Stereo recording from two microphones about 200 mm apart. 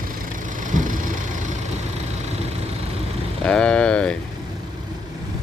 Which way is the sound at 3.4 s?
5° left (ahead or behind).